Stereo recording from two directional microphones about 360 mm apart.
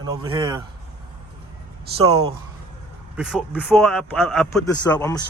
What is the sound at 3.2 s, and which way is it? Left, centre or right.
A man's voice, centre.